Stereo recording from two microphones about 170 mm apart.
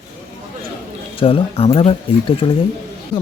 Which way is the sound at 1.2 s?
35° left (ahead or behind).